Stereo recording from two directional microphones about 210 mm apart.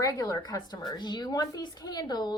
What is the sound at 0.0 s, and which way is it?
A woman's voice, 15° left (ahead or behind).